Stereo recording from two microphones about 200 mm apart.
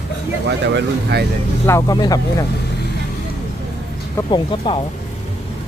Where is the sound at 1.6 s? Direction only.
15° left (ahead or behind).